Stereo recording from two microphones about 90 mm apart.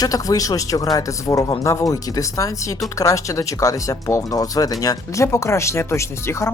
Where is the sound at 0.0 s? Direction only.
40° left (ahead or behind).